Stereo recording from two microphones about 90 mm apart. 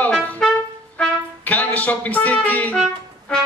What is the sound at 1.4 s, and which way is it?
Speech, 20° left (ahead or behind).